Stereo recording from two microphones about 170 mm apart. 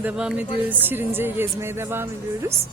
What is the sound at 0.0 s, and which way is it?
Speech, 5° right (ahead or behind).